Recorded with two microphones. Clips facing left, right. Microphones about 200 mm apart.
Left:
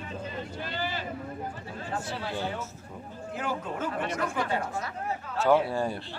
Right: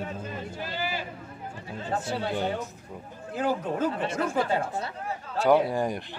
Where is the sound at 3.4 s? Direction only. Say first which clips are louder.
Right 6 dB; 35° right (ahead or behind).